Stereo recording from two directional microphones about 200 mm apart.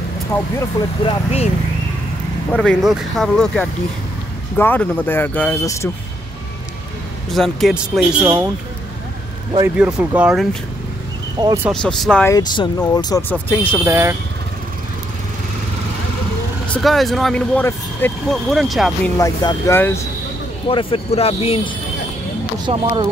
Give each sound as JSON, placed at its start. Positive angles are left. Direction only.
{"t": 0.3, "sound": "speech", "side_deg": 15}
{"t": 2.5, "sound": "speech", "side_deg": 5}
{"t": 7.2, "sound": "speech", "side_deg": 0}
{"t": 9.9, "sound": "speech", "side_deg": -5}
{"t": 11.3, "sound": "speech", "side_deg": -15}
{"t": 11.7, "sound": "speech", "side_deg": 5}
{"t": 12.3, "sound": "speech", "side_deg": 15}
{"t": 13.8, "sound": "speech", "side_deg": -10}
{"t": 16.7, "sound": "speech", "side_deg": 0}
{"t": 19.1, "sound": "speech", "side_deg": 15}
{"t": 20.6, "sound": "speech", "side_deg": 25}
{"t": 22.7, "sound": "speech", "side_deg": -30}